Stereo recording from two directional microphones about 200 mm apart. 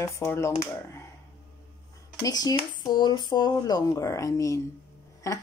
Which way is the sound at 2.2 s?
20° left (ahead or behind).